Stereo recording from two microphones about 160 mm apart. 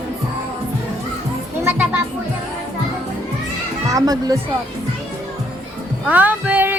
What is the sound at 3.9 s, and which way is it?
Speech, 25° right (ahead or behind).